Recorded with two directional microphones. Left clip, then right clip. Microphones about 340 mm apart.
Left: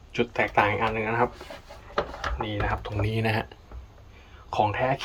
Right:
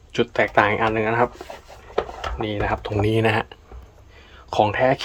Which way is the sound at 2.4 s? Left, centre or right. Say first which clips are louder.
Right 7 dB; centre.